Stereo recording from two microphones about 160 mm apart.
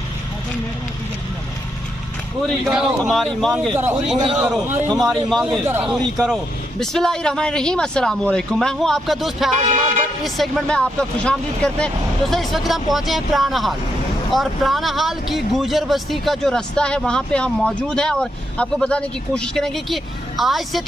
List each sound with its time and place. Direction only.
2.4 s speech: centre (ahead or behind)
9.7 s music: 45° right (ahead or behind)
10.2 s speech: centre (ahead or behind)